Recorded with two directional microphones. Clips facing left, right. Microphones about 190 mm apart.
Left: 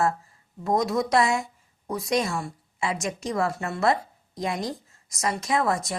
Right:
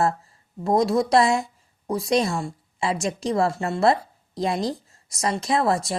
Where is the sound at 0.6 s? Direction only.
30° right (ahead or behind).